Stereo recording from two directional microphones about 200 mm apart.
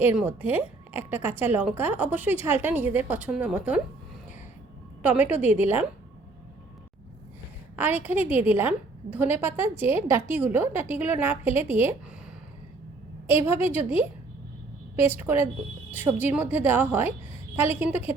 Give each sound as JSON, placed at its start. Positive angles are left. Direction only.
{"t": 0.0, "sound": "a woman's voice", "side_deg": -10}
{"t": 5.3, "sound": "a woman's voice", "side_deg": -10}
{"t": 7.8, "sound": "a woman's voice", "side_deg": -10}
{"t": 13.2, "sound": "a woman's voice", "side_deg": -10}
{"t": 15.0, "sound": "a woman's voice", "side_deg": -10}